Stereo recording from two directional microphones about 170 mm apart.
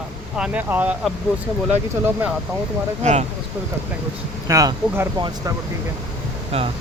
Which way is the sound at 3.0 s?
45° right (ahead or behind).